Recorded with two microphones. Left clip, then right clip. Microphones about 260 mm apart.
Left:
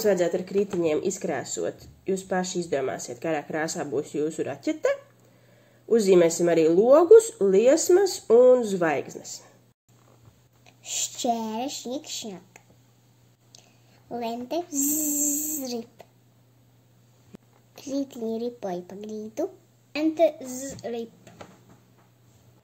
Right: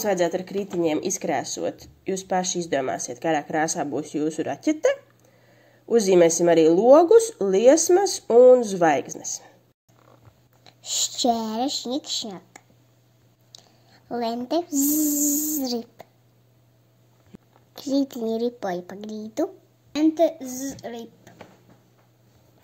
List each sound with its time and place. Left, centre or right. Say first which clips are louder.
0.0 s speech: even; right
11.3 s speech: right 5 dB; right
13.5 s speech: right 5 dB; right
17.3 s a sound: even; centre
17.7 s speech: right 6 dB; right